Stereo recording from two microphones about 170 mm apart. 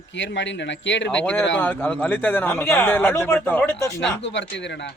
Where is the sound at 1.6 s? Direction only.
10° left (ahead or behind).